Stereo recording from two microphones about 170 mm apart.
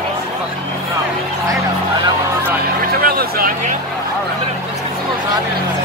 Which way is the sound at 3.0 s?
60° right (ahead or behind).